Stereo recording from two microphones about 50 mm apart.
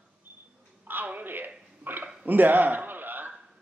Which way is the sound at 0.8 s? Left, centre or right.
Right.